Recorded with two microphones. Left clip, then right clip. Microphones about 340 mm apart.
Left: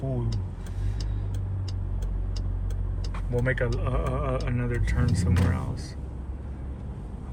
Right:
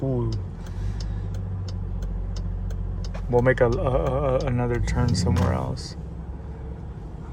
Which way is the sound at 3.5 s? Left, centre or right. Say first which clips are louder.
Right 7 dB; centre.